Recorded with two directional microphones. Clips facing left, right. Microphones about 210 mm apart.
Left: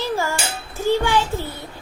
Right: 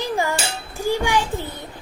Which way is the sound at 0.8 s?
10° right (ahead or behind).